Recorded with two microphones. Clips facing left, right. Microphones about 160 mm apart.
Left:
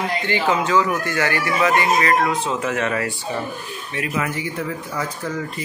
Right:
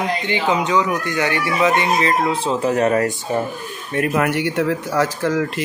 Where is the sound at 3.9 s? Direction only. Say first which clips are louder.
Right 7 dB; 55° right (ahead or behind); by 5.6 s 90° right.